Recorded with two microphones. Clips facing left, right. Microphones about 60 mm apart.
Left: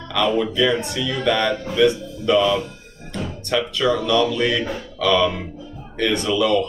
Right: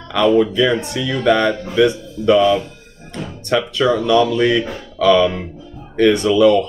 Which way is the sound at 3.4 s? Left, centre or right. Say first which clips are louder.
Right 5 dB; right.